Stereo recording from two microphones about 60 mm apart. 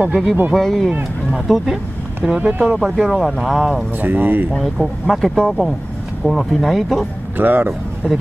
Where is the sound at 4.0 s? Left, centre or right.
Right.